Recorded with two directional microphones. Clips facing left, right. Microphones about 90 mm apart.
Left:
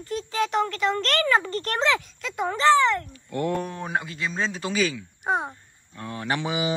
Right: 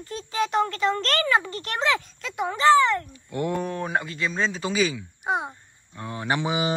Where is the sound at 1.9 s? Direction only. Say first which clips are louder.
Left 1 dB; 25° right (ahead or behind).